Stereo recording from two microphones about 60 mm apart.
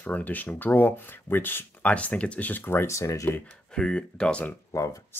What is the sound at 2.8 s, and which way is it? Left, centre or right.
Speech, left.